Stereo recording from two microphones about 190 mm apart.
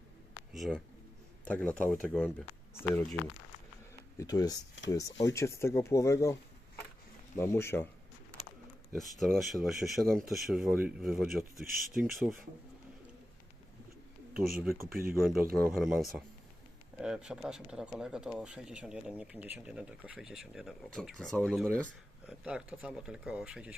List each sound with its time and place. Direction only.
0.5 s speech: centre (ahead or behind)
2.2 s speech: 10° left (ahead or behind)
4.2 s speech: 20° left (ahead or behind)
7.3 s speech: 15° left (ahead or behind)
9.0 s speech: centre (ahead or behind)
11.6 s speech: 50° right (ahead or behind)
14.8 s speech: 50° right (ahead or behind)
15.6 s speech: centre (ahead or behind)